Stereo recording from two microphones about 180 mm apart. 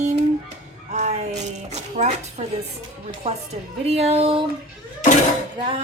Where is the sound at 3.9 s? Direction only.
35° right (ahead or behind).